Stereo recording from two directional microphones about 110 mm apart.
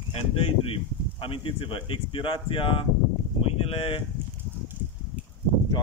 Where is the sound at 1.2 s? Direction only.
55° left (ahead or behind).